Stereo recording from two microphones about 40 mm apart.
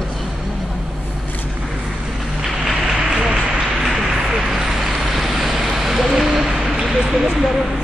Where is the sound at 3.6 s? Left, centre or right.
Centre.